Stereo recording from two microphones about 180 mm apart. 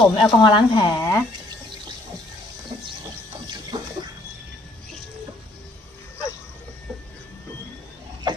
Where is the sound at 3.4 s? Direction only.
25° right (ahead or behind).